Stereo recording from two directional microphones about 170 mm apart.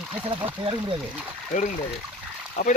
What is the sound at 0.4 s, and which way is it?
Speech, 30° right (ahead or behind).